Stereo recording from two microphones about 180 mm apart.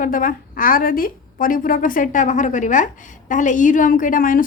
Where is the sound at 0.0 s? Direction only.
50° left (ahead or behind).